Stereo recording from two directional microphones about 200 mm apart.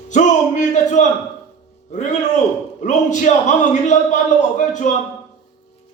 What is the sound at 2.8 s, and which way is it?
A man's voice, 35° left (ahead or behind).